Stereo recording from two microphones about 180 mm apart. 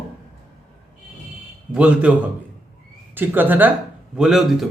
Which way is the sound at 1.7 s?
10° right (ahead or behind).